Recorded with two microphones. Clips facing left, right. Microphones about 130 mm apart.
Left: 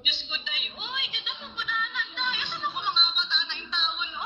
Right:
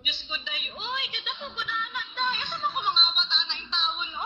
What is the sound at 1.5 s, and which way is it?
Music, 70° right (ahead or behind).